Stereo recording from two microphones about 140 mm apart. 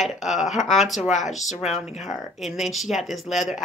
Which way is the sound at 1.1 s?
60° left (ahead or behind).